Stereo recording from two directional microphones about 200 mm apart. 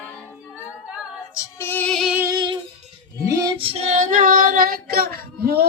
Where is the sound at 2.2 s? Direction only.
20° right (ahead or behind).